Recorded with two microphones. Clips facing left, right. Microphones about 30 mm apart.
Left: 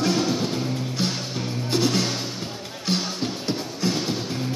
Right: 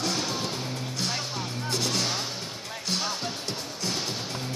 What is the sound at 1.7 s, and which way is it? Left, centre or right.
Music, centre.